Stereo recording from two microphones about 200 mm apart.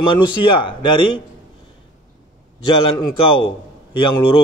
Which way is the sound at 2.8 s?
25° left (ahead or behind).